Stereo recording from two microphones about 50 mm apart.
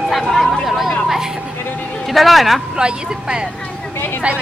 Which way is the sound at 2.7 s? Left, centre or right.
Centre.